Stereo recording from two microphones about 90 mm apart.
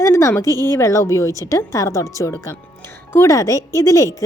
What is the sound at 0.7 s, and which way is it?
Speech, 30° left (ahead or behind).